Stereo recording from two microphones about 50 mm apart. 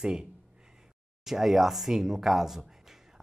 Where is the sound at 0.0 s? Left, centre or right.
Centre.